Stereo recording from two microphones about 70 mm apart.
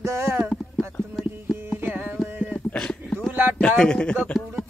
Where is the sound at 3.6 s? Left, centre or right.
Centre.